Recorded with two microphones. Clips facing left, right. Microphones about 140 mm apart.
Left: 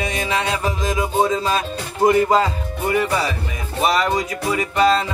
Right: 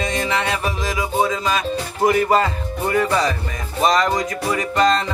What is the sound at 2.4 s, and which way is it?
Music, 15° left (ahead or behind).